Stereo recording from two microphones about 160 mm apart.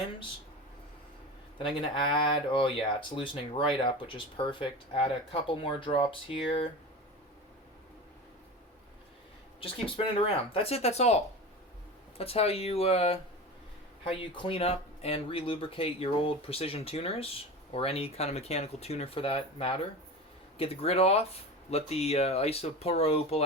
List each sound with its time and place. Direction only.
1.5 s speech: 30° left (ahead or behind)
9.6 s speech: 35° left (ahead or behind)